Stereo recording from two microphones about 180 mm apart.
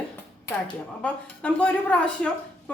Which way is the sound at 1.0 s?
5° left (ahead or behind).